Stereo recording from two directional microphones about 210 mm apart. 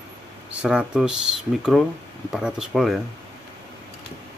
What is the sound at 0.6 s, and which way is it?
Speech, 5° right (ahead or behind).